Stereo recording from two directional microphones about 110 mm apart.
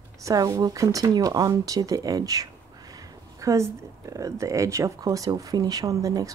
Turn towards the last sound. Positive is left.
turn(degrees=-30)  # may be behind; listen again after turning